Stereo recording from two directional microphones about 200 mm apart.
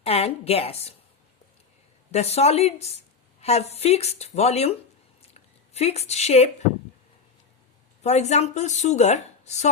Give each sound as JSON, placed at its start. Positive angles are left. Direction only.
{"t": 0.0, "sound": "a woman's voice", "side_deg": 30}
{"t": 2.1, "sound": "speech", "side_deg": 30}
{"t": 8.0, "sound": "speech", "side_deg": 35}